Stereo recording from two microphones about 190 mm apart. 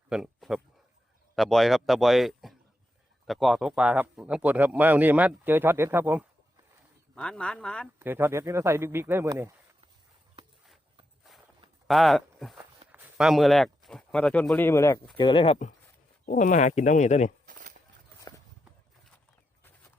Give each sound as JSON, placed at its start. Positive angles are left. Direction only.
{"t": 0.1, "sound": "speech", "side_deg": 0}
{"t": 7.2, "sound": "speech", "side_deg": 5}
{"t": 7.9, "sound": "speech", "side_deg": -10}
{"t": 11.9, "sound": "speech", "side_deg": 0}
{"t": 15.2, "sound": "speech", "side_deg": 25}
{"t": 16.2, "sound": "speech", "side_deg": 45}
{"t": 17.4, "sound": "a sound", "side_deg": -45}